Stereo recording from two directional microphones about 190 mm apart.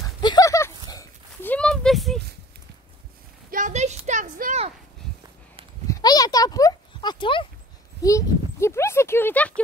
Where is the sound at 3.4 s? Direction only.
45° right (ahead or behind).